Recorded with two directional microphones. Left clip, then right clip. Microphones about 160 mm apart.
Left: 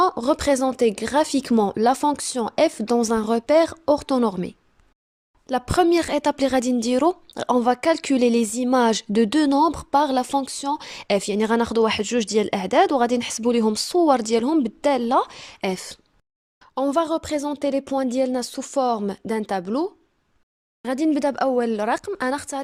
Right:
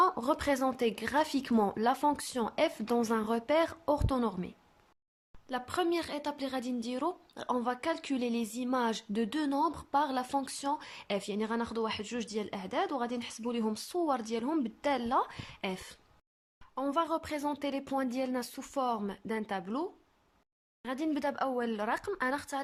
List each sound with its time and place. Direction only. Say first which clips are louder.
0.0 s a woman's voice: left 9 dB; 20° left (ahead or behind)